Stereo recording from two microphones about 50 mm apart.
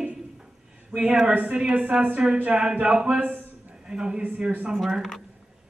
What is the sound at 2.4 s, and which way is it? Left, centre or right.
A man's voice, right.